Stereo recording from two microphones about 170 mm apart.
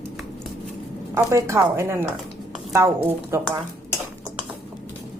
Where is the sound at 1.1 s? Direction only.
15° right (ahead or behind).